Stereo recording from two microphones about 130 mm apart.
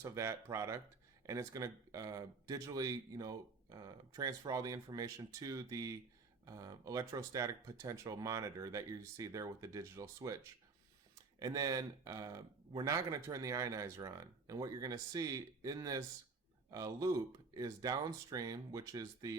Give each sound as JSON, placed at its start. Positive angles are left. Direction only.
{"t": 0.0, "sound": "speech", "side_deg": -20}